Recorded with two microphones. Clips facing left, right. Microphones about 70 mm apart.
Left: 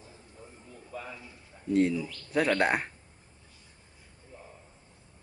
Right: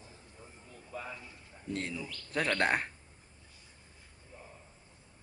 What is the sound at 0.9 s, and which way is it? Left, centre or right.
Mechanisms, centre.